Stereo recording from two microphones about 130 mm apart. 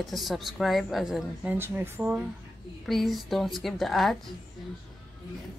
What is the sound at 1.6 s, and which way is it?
Speech, 15° right (ahead or behind).